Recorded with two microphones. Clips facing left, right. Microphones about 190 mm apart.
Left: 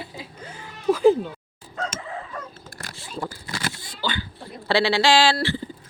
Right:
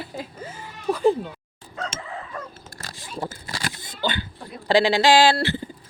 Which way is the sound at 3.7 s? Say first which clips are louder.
Right 2 dB; 20° right (ahead or behind).